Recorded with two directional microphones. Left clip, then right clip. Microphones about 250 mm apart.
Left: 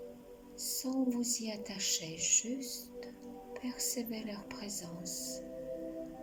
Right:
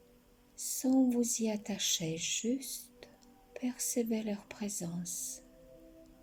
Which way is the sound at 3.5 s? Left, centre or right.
Centre.